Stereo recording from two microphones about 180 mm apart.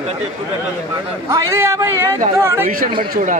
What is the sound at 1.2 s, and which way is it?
Speech, 15° right (ahead or behind).